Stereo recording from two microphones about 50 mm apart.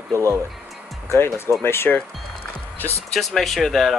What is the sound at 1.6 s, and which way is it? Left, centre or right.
Speech, left.